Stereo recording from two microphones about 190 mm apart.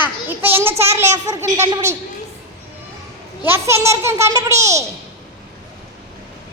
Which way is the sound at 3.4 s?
15° right (ahead or behind).